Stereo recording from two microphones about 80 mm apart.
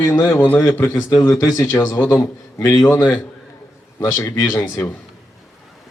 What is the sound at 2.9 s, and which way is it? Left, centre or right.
Speech, left.